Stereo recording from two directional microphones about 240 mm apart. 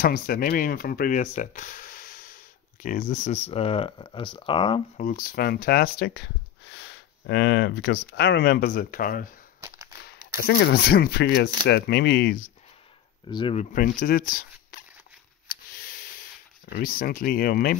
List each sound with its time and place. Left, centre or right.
0.0 s speech: left
5.0 s speech: left
9.6 s a sound: centre
10.0 s speech: left
13.3 s speech: left
13.7 s speech: left
15.4 s a sound: left
16.6 s speech: left